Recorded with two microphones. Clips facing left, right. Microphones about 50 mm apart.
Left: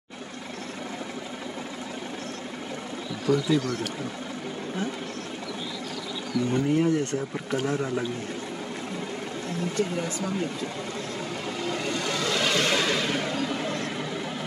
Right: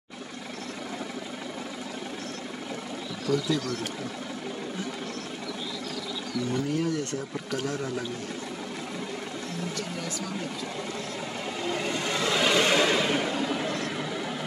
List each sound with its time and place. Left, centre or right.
3.3 s speech: centre
6.5 s speech: left
11.6 s vehicle: centre